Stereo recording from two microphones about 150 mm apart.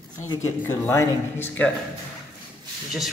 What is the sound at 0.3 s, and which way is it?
Speech, 20° left (ahead or behind).